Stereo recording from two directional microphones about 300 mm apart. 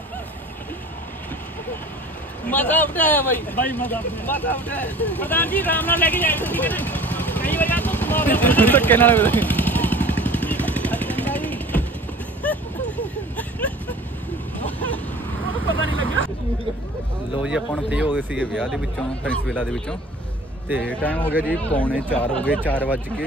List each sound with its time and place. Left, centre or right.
2.4 s speech: centre
12.4 s a sound: centre
15.7 s vehicle: right
17.4 s speech: centre
21.0 s speech: centre